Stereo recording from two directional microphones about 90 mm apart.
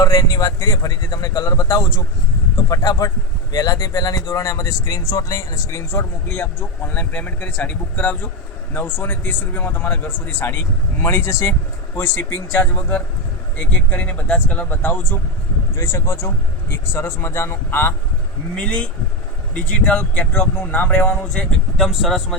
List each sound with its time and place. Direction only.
0.0 s a man's voice: 45° left (ahead or behind)
5.9 s speech: 25° left (ahead or behind)
15.7 s speech: 30° left (ahead or behind)
18.5 s speech: 10° left (ahead or behind)
21.8 s speech: centre (ahead or behind)